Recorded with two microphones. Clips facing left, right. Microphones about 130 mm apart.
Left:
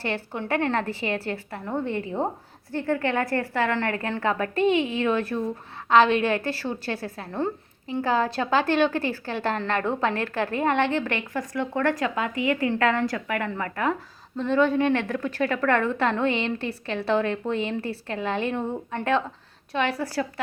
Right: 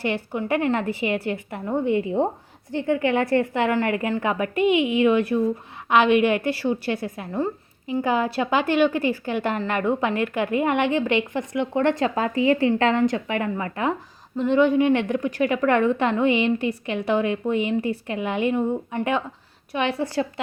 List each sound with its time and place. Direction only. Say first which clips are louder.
0.0 s a woman's voice: right 4 dB; 15° right (ahead or behind)
7.3 s speech: right 1 dB; 5° right (ahead or behind)
8.0 s a woman's voice: right 1 dB; 15° right (ahead or behind)